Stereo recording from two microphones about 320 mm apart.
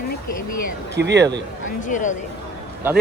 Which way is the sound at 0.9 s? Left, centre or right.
Right.